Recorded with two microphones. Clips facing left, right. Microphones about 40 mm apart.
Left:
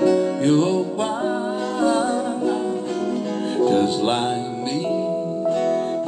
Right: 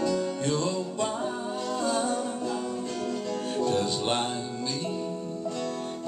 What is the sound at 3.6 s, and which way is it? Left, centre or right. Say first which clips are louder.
Music: left 10 dB; left.